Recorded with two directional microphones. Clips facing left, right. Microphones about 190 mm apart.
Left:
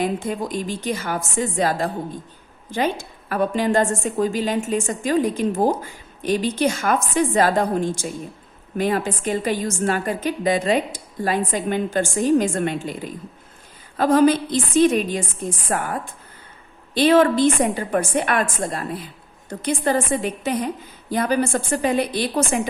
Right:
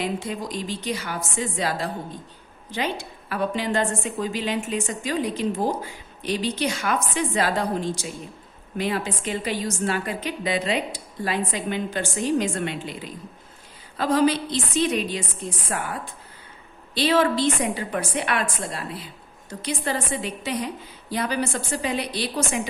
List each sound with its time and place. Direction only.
0.0 s a woman's voice: 50° left (ahead or behind)